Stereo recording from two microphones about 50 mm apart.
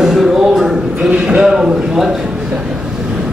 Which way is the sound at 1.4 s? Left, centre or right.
Centre.